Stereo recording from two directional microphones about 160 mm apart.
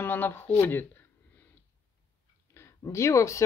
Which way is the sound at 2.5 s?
15° left (ahead or behind).